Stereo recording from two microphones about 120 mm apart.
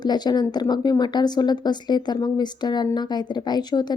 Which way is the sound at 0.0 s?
35° left (ahead or behind).